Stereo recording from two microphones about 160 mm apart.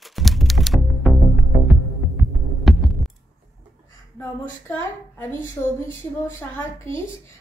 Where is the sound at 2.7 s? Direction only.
Centre (ahead or behind).